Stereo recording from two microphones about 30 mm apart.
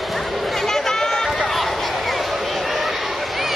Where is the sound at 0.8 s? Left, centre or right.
Centre.